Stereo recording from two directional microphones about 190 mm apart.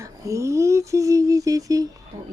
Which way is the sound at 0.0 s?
15° right (ahead or behind).